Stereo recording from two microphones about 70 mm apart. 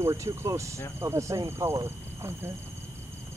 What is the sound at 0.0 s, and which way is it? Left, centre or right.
Speech, right.